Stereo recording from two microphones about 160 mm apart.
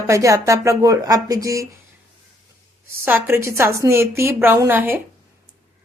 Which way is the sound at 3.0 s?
15° right (ahead or behind).